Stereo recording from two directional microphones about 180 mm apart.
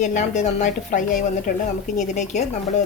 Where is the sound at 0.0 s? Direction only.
40° left (ahead or behind).